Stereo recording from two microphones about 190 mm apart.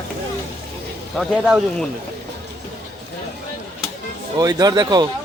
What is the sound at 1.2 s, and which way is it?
Speech, centre (ahead or behind).